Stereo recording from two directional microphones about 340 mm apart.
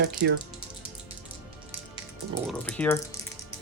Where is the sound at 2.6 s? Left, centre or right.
Centre.